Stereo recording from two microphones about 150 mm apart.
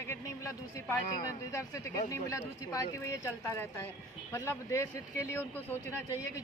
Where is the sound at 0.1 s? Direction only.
15° left (ahead or behind).